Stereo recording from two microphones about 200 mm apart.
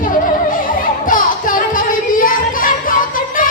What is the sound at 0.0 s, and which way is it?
Music, 45° left (ahead or behind).